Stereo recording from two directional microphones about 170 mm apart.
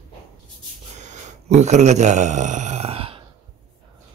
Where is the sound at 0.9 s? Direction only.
45° right (ahead or behind).